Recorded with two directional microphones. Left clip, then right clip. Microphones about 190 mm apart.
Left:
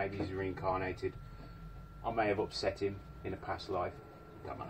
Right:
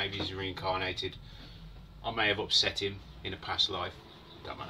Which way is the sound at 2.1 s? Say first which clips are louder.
Right 4 dB; 30° right (ahead or behind).